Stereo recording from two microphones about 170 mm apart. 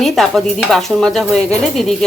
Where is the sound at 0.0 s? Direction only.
Centre (ahead or behind).